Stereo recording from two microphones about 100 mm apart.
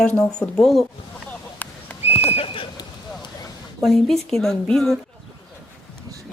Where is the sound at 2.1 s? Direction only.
90° left; by 2.7 s 65° left (ahead or behind).